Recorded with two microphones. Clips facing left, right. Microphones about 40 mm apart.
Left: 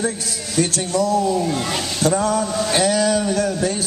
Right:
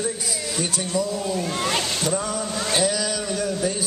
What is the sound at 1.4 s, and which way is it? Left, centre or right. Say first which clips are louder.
Speech: left 2 dB; centre.